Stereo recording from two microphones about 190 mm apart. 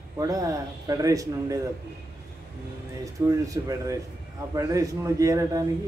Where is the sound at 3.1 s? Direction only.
15° right (ahead or behind).